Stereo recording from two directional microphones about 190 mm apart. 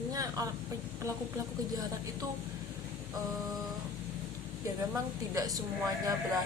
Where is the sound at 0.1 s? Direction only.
20° right (ahead or behind).